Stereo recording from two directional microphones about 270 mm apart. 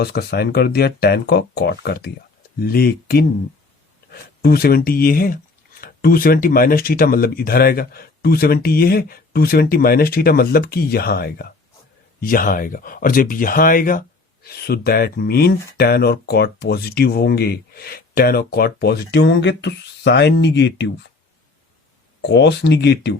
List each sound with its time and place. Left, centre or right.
0.0 s speech: left
22.2 s speech: left